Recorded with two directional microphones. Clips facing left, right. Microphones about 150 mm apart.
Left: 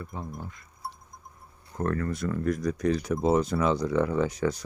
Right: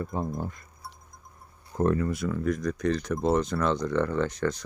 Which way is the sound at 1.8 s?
15° right (ahead or behind).